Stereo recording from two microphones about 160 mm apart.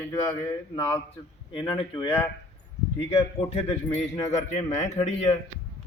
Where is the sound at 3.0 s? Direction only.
40° left (ahead or behind).